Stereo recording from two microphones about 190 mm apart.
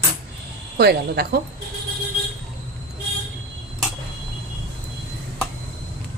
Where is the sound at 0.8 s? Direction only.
60° right (ahead or behind).